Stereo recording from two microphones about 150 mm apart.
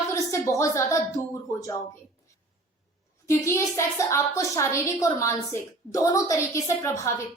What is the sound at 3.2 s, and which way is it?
A woman's voice, 20° left (ahead or behind).